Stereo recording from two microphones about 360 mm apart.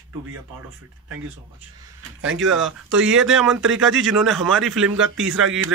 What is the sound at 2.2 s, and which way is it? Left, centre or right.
Speech, right.